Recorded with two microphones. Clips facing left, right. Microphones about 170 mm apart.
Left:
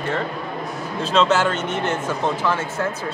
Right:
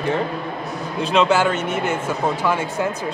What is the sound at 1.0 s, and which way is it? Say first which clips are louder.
Speech: right 1 dB; 15° right (ahead or behind).